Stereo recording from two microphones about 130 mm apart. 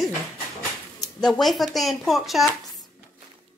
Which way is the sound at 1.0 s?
5° left (ahead or behind).